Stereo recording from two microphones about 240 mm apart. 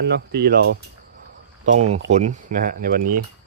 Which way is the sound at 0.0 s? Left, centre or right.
Right.